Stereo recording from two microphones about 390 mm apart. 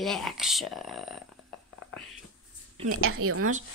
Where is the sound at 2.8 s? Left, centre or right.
Right.